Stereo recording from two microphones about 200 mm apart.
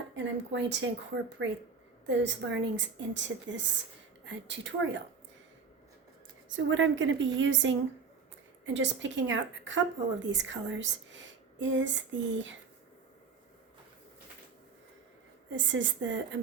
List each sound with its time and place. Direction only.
0.5 s a woman's voice: 60° right (ahead or behind)
6.7 s a woman's voice: 70° right (ahead or behind)
15.4 s a woman's voice: 65° right (ahead or behind)